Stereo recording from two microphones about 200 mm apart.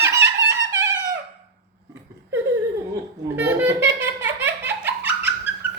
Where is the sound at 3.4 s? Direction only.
10° right (ahead or behind).